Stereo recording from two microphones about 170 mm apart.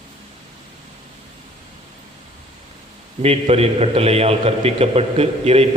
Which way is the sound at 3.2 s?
35° right (ahead or behind).